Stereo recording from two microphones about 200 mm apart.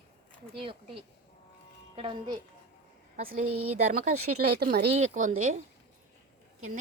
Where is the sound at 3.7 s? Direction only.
35° right (ahead or behind).